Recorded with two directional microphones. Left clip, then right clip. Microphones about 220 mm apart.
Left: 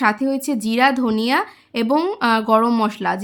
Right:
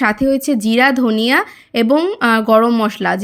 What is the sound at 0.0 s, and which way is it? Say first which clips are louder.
Speech: right 4 dB; 20° right (ahead or behind).